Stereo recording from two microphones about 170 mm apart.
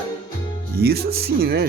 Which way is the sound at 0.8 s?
65° right (ahead or behind).